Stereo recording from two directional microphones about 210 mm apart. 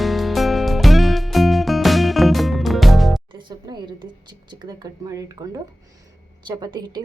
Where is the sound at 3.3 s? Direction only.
20° right (ahead or behind).